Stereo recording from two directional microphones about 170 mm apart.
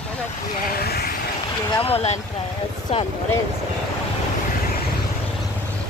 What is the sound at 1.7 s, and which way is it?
Speech, 35° left (ahead or behind).